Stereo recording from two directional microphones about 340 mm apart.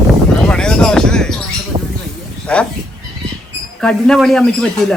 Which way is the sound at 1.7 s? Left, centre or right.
Centre.